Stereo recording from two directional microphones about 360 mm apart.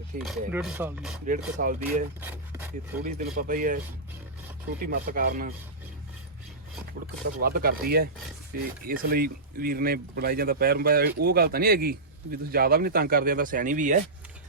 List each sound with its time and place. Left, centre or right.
0.3 s speech: centre
1.3 s speech: right
2.2 s speech: centre
3.0 s speech: right
4.9 s speech: right
7.4 s speech: right